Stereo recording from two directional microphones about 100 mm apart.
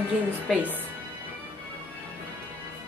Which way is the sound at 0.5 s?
15° right (ahead or behind).